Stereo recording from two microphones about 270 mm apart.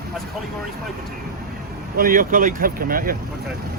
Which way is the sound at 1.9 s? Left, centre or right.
Right.